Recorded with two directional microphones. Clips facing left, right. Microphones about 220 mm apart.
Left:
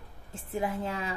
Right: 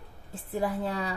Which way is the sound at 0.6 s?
35° right (ahead or behind).